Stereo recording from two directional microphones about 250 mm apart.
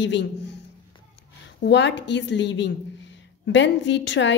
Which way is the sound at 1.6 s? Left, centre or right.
Left.